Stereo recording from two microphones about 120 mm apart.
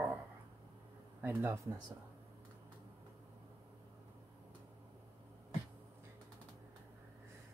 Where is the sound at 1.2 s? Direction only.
15° right (ahead or behind).